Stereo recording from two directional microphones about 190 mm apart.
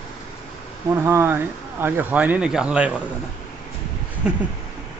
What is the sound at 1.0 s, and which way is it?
Speech, 15° right (ahead or behind).